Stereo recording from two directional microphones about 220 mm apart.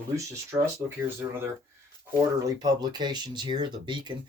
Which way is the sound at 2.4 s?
15° right (ahead or behind).